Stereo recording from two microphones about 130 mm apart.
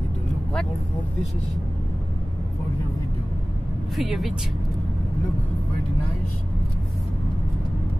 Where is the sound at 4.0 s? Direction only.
Centre (ahead or behind).